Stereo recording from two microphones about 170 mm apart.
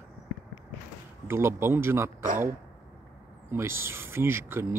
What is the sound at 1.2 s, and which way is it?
Speech, 15° right (ahead or behind).